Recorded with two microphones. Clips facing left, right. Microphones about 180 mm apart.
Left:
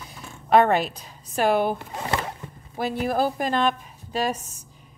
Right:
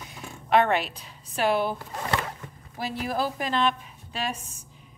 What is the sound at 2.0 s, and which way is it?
Speech, 25° left (ahead or behind).